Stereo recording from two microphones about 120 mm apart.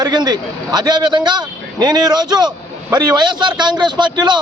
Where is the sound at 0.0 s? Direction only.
35° right (ahead or behind).